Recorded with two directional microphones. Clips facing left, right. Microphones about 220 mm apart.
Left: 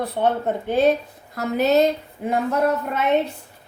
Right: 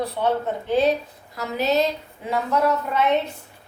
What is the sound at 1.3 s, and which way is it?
Speech, 55° left (ahead or behind).